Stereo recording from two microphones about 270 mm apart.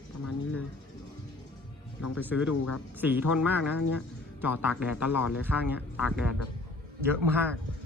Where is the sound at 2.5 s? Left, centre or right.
Left.